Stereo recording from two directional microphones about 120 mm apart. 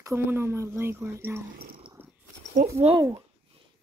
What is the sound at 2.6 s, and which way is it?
Speech, 90° right.